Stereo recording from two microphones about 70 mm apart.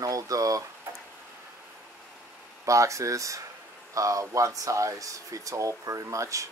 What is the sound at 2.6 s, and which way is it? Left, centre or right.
Speech, right.